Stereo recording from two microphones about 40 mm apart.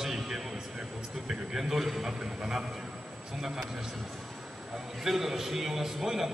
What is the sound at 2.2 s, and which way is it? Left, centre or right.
Speech, centre.